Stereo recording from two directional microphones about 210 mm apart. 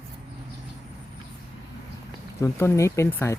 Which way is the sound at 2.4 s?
15° left (ahead or behind).